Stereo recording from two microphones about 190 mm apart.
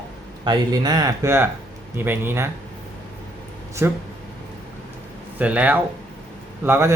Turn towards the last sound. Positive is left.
turn(degrees=-15)  # may be behind; listen again after turning